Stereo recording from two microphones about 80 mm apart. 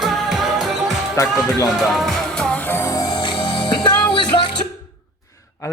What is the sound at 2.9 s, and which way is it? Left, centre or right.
Music, left.